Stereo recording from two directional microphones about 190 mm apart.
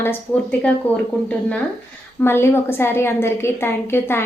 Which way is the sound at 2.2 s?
10° left (ahead or behind).